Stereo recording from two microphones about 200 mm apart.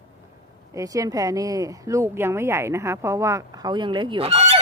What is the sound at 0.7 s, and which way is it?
Speech, 15° right (ahead or behind).